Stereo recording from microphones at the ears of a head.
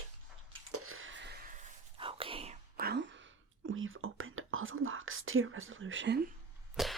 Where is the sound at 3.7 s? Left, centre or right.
Right.